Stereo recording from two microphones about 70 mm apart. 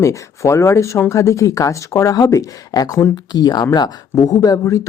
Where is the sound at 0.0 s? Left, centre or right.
Left.